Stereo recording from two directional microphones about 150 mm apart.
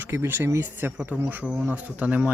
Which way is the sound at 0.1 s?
15° right (ahead or behind).